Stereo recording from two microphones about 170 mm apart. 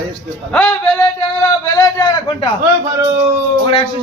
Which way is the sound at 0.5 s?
10° left (ahead or behind).